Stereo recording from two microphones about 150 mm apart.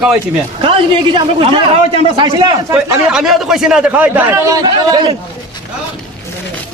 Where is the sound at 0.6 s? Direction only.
35° right (ahead or behind).